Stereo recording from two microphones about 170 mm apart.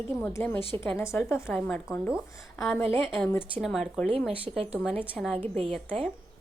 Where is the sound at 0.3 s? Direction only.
10° left (ahead or behind).